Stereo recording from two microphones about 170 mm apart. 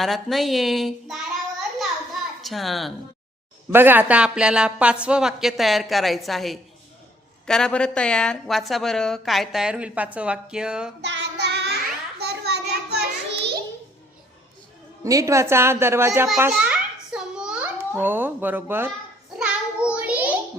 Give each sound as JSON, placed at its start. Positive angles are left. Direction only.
{"t": 0.0, "sound": "a woman's voice", "side_deg": 0}
{"t": 2.4, "sound": "a woman's voice", "side_deg": 0}
{"t": 3.7, "sound": "a woman's voice", "side_deg": -10}
{"t": 11.0, "sound": "child singing", "side_deg": -90}
{"t": 12.2, "sound": "a sound", "side_deg": -75}
{"t": 15.0, "sound": "a woman's voice", "side_deg": -20}
{"t": 17.1, "sound": "a sound", "side_deg": -5}
{"t": 19.4, "sound": "child singing", "side_deg": -5}